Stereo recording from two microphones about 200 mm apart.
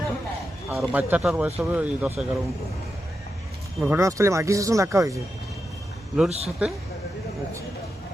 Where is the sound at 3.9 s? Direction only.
15° right (ahead or behind).